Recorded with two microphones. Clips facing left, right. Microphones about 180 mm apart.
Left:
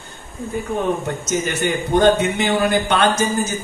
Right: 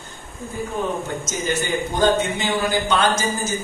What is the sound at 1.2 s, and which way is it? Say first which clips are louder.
A man's voice: left 3 dB; 65° left (ahead or behind).